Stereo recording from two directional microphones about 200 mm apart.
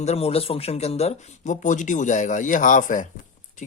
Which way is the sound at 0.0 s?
30° left (ahead or behind).